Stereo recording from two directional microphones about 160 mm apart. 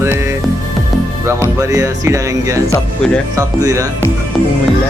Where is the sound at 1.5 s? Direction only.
20° right (ahead or behind).